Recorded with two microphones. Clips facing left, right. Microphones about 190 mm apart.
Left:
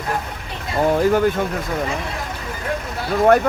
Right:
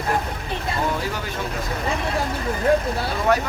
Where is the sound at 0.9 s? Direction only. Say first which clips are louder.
Left 12 dB; 50° left (ahead or behind).